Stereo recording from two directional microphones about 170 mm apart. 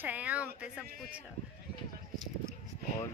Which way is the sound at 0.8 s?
60° right (ahead or behind).